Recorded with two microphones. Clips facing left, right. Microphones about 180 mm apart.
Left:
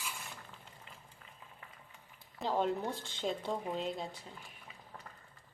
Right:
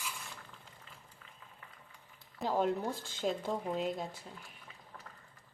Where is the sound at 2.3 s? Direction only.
5° right (ahead or behind).